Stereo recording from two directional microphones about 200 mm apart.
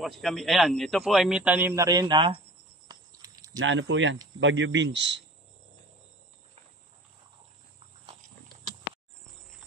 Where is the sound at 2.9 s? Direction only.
20° right (ahead or behind).